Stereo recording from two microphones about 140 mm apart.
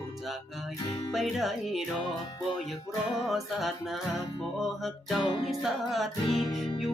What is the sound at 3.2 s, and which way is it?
Music, centre (ahead or behind).